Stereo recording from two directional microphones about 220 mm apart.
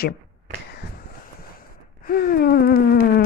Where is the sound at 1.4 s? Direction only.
40° left (ahead or behind).